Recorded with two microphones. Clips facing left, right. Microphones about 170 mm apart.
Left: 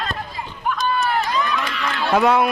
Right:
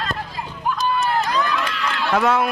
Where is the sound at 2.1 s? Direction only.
15° left (ahead or behind).